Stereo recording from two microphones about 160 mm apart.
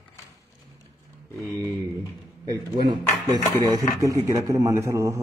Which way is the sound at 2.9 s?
25° right (ahead or behind).